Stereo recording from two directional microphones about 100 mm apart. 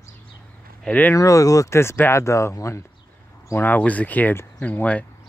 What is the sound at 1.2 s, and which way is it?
Speech, 35° left (ahead or behind).